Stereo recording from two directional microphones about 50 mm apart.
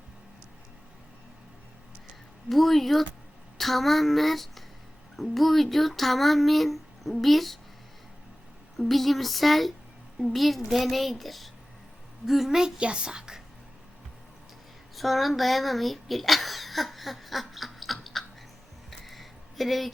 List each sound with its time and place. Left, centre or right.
2.5 s speech: centre
8.8 s a woman's voice: centre
14.9 s a sound: centre